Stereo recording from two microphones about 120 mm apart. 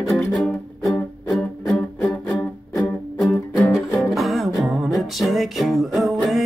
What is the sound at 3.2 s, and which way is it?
Music, 25° left (ahead or behind).